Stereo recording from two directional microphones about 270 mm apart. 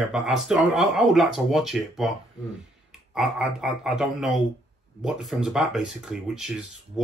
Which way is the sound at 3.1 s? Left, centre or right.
Centre.